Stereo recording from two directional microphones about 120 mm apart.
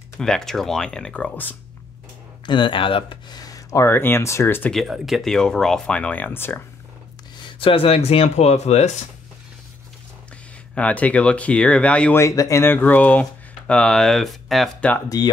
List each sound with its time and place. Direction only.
0.2 s speech: 5° left (ahead or behind)
2.4 s speech: 40° left (ahead or behind); by 4.7 s 15° left (ahead or behind)
4.7 s speech: 5° right (ahead or behind); by 6.6 s 15° left (ahead or behind)
7.3 s speech: 45° left (ahead or behind); by 8.9 s 65° left (ahead or behind)
10.7 s speech: 10° left (ahead or behind)
12.2 s speech: 25° left (ahead or behind); by 14.7 s centre (ahead or behind)
15.1 s speech: 30° left (ahead or behind)